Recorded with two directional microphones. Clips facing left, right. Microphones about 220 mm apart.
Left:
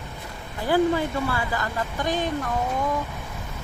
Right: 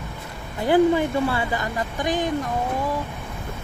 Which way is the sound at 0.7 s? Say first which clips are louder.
Right 4 dB; 25° right (ahead or behind).